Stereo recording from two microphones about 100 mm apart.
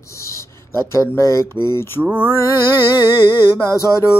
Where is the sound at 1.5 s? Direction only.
45° right (ahead or behind).